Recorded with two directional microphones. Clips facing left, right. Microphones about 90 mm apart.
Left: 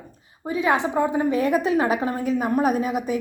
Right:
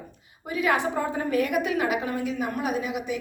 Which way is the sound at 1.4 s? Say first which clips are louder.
Left 2 dB; 30° left (ahead or behind).